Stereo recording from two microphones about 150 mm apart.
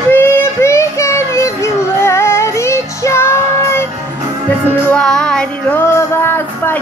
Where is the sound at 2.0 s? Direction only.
15° left (ahead or behind).